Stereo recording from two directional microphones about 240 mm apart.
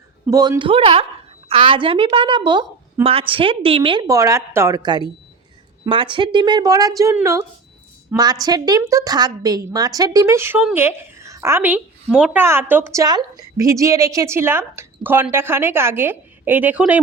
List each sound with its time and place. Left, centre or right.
0.3 s a woman's voice: centre